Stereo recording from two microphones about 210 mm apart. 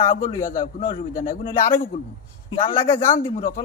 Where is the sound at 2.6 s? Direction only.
25° left (ahead or behind).